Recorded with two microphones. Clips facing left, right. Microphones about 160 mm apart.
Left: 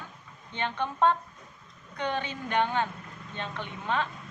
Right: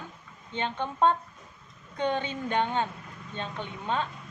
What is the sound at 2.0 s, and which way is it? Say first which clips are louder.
A woman's voice: right 3 dB; 25° right (ahead or behind).